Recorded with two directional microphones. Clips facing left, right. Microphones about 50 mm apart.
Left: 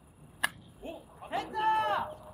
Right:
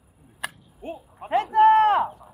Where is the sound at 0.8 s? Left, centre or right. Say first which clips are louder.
Right 7 dB; right.